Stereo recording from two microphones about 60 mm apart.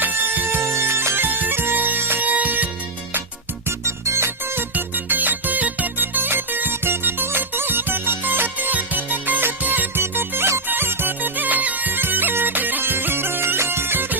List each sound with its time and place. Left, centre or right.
0.0 s music: right
0.6 s music: right
3.8 s music: right
4.7 s music: right